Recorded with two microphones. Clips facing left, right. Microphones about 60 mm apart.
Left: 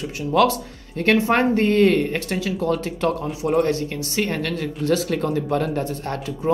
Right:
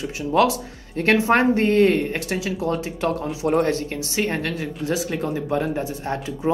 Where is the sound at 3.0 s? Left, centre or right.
Right.